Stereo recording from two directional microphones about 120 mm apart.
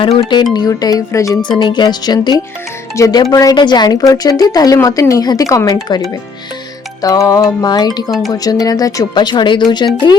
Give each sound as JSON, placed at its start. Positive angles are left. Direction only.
{"t": 0.5, "sound": "a woman's voice", "side_deg": 35}
{"t": 7.0, "sound": "a woman's voice", "side_deg": 30}